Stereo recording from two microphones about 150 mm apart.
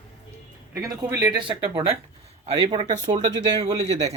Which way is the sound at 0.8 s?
25° right (ahead or behind).